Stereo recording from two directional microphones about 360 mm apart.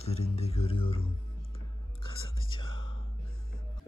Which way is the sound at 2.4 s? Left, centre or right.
Centre.